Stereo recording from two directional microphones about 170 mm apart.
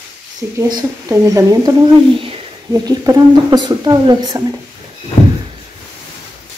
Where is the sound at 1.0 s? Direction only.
20° right (ahead or behind).